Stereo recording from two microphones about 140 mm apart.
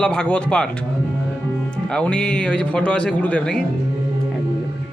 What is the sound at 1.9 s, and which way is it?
Speech, 5° left (ahead or behind).